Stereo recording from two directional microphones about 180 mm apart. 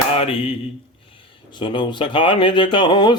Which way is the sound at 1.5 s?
25° left (ahead or behind).